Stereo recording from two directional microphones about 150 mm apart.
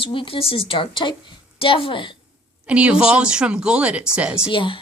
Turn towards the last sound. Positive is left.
turn(degrees=35)  # may be behind; listen again after turning